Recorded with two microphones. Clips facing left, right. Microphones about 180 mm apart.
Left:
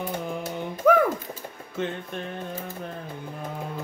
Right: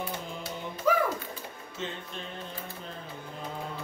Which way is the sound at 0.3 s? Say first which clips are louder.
Left 7 dB; 55° left (ahead or behind).